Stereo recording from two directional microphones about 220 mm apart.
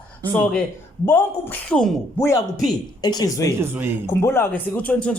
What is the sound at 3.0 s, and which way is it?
Speech, 20° left (ahead or behind).